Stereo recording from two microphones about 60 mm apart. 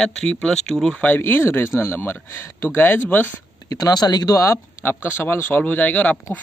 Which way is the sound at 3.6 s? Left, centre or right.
Left.